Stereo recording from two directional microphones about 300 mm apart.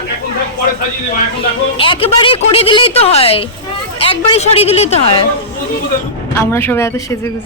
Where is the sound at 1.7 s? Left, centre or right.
Centre.